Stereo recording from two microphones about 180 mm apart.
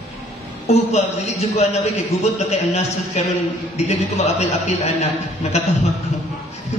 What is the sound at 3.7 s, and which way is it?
A man's voice, 40° left (ahead or behind).